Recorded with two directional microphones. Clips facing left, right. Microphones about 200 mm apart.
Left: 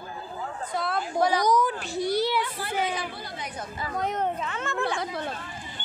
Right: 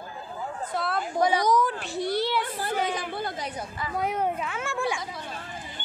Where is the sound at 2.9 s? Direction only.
50° right (ahead or behind).